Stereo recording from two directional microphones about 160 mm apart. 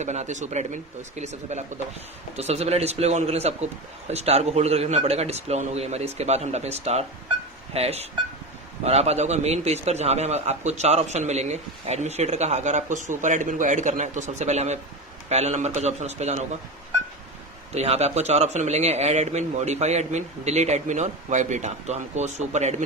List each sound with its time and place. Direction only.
0.0 s a man's voice: 45° right (ahead or behind)
17.7 s a man's voice: 40° right (ahead or behind)